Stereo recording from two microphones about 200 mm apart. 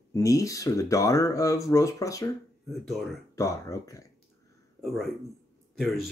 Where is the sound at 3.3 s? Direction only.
15° left (ahead or behind).